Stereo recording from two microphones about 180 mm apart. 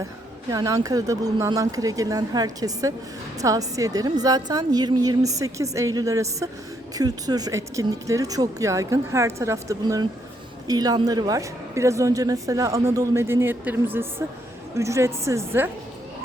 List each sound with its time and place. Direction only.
0.5 s speech: 20° right (ahead or behind)